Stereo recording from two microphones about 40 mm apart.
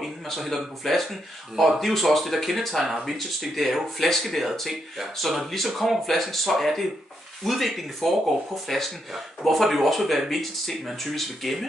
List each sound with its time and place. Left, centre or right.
0.0 s speech: centre